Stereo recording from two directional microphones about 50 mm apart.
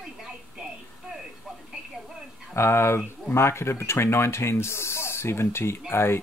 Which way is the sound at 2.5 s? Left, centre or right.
Left.